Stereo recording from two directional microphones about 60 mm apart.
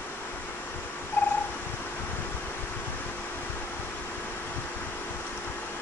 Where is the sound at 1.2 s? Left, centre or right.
Left.